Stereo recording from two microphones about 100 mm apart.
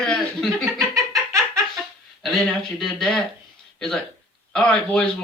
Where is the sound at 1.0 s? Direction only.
30° right (ahead or behind).